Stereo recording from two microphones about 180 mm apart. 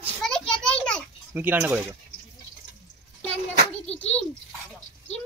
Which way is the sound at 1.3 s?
10° right (ahead or behind).